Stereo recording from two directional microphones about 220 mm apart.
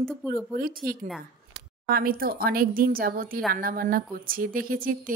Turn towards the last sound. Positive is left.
turn(degrees=-40)  # may be behind; listen again after turning